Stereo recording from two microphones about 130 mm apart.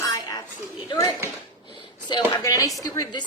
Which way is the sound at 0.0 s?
25° left (ahead or behind).